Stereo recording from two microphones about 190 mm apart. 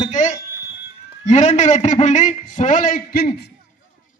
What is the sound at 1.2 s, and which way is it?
A man's voice, 35° left (ahead or behind).